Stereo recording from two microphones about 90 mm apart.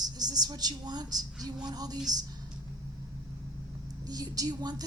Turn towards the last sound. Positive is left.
turn(degrees=-50)  # may be behind; listen again after turning